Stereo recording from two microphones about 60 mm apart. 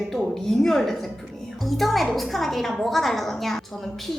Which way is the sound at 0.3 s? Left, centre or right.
Centre.